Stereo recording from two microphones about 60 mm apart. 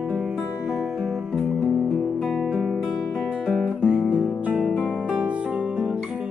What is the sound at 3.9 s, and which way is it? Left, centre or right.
Guitar, right.